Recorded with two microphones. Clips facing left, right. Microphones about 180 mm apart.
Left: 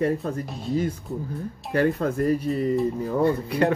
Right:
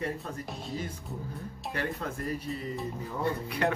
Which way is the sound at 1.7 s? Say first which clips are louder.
Left 13 dB; 50° left (ahead or behind).